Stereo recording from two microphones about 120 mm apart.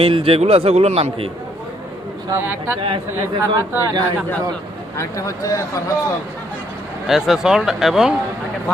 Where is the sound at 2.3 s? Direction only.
20° right (ahead or behind).